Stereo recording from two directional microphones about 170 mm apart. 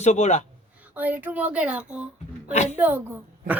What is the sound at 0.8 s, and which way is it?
A woman's voice, 10° right (ahead or behind).